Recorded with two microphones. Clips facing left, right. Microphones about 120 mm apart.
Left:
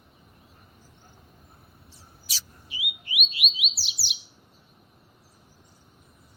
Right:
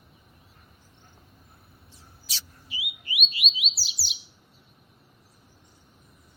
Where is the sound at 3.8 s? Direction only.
25° left (ahead or behind).